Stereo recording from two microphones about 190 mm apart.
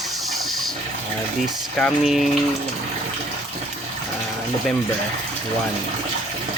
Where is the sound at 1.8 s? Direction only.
Centre (ahead or behind).